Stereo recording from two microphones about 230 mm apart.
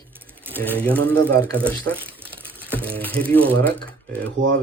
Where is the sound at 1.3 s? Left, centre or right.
Centre.